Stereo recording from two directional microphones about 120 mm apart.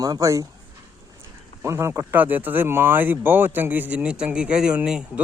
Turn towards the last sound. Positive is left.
turn(degrees=-5)  # may be behind; listen again after turning